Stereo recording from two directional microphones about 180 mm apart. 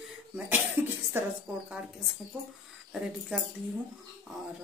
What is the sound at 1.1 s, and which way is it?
Speech, 10° right (ahead or behind).